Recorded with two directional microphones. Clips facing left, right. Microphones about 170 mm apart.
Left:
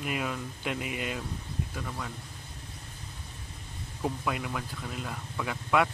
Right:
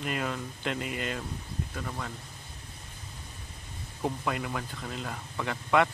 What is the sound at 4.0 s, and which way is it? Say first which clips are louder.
Speech: right 1 dB; centre (ahead or behind).